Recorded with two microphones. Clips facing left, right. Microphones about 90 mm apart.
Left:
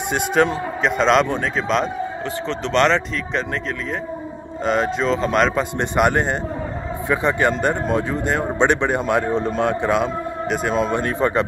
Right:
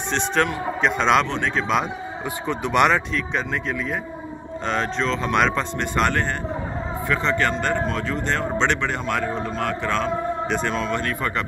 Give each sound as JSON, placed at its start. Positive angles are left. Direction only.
{"t": 0.1, "sound": "a man's voice", "side_deg": 10}
{"t": 2.4, "sound": "speech", "side_deg": -10}
{"t": 4.6, "sound": "speech", "side_deg": 5}
{"t": 5.8, "sound": "a man's voice", "side_deg": 15}